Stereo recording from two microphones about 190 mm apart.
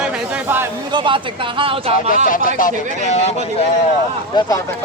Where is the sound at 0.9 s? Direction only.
25° right (ahead or behind).